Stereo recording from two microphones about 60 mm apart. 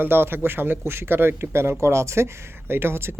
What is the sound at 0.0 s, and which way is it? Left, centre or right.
Speech, right.